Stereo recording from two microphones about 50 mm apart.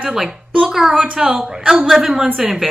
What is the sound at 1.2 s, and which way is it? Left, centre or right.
Speech, right.